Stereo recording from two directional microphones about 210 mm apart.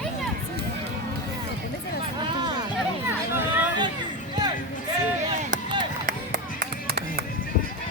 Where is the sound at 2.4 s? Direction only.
20° right (ahead or behind).